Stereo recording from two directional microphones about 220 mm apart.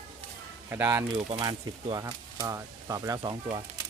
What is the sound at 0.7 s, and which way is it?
Speech, 10° right (ahead or behind).